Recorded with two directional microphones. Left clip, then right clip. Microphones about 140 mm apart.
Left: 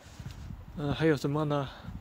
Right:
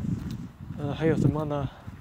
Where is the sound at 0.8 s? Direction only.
25° left (ahead or behind).